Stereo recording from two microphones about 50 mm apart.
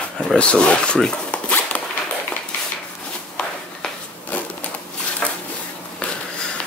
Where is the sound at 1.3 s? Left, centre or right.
Left.